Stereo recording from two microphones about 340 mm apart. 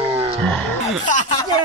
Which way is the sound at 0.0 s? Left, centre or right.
Centre.